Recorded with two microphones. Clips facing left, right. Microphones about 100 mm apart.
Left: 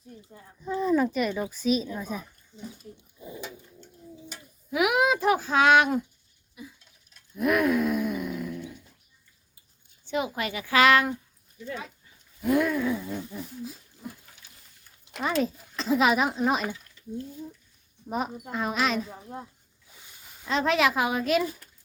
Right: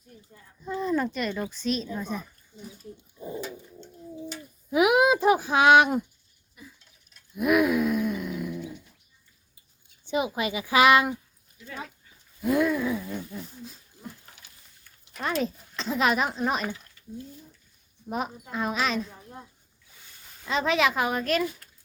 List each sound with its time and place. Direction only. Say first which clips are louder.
0.6 s speech: left 3 dB; centre (ahead or behind)
3.2 s pigeon: right 7 dB; 35° right (ahead or behind)
4.7 s speech: right 3 dB; 25° right (ahead or behind)
6.6 s a sound: left 5 dB; 5° left (ahead or behind)
7.1 s gasp: right 2 dB; 5° right (ahead or behind)
10.1 s speech: right 2 dB; 20° right (ahead or behind)
12.4 s speech: even; centre (ahead or behind)
13.0 s a sound: left 1 dB; 10° left (ahead or behind)
15.2 s speech: left 2 dB; centre (ahead or behind)
18.5 s speech: even; centre (ahead or behind)
20.4 s speech: left 1 dB; centre (ahead or behind)